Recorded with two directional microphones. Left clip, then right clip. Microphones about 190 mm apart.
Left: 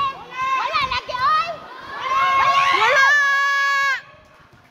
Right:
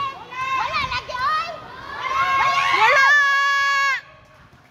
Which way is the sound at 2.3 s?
20° left (ahead or behind).